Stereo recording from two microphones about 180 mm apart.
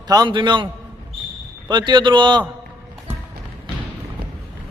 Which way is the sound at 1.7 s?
25° right (ahead or behind).